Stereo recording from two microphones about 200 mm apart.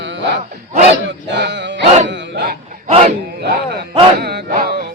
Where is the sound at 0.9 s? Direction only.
60° right (ahead or behind).